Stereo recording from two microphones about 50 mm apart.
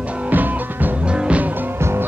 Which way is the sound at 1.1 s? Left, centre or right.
Right.